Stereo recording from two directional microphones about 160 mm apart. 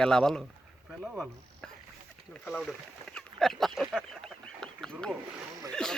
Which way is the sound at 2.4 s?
5° left (ahead or behind).